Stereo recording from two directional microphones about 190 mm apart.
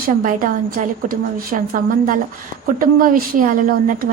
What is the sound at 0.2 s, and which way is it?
A woman's voice, 45° right (ahead or behind).